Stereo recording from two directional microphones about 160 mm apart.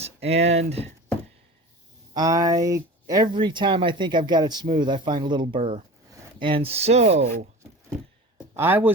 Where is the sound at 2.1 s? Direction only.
20° right (ahead or behind); by 7.3 s 45° right (ahead or behind).